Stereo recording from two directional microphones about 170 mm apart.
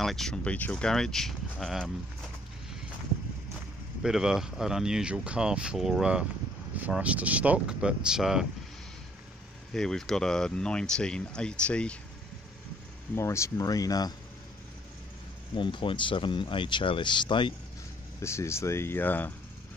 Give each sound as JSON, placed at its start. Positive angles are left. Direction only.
{"t": 0.0, "sound": "speech", "side_deg": 0}
{"t": 4.0, "sound": "speech", "side_deg": -5}
{"t": 9.8, "sound": "speech", "side_deg": 5}
{"t": 13.1, "sound": "speech", "side_deg": 15}
{"t": 15.5, "sound": "speech", "side_deg": 30}
{"t": 18.2, "sound": "speech", "side_deg": 15}